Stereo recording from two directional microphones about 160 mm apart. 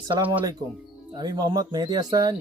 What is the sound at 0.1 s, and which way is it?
Speech, 30° right (ahead or behind).